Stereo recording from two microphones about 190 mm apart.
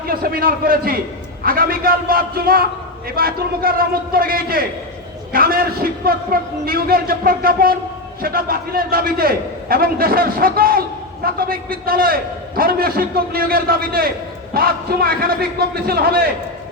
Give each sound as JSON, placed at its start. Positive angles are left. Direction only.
{"t": 0.1, "sound": "a man's voice", "side_deg": -50}